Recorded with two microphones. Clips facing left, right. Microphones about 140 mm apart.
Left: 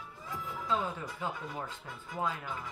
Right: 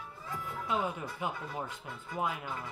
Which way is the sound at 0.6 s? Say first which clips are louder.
Even; 15° right (ahead or behind).